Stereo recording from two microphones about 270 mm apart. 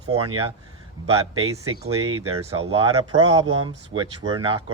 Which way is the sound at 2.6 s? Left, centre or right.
Centre.